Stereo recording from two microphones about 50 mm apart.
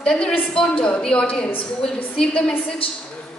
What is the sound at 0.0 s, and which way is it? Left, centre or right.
Speech, centre.